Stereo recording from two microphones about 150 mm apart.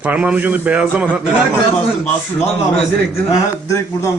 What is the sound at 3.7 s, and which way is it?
Speech, 20° left (ahead or behind).